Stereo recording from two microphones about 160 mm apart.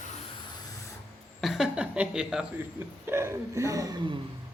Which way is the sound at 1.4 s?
Centre (ahead or behind).